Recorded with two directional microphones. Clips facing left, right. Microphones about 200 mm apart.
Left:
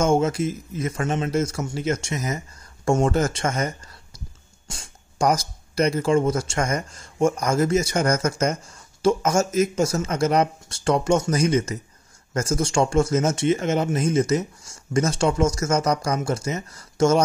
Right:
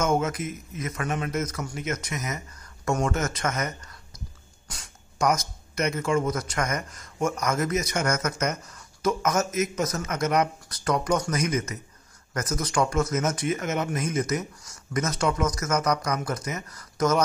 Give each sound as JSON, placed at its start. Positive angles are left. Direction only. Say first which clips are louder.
{"t": 0.0, "sound": "speech", "louder": "left 5 dB", "side_deg": 30}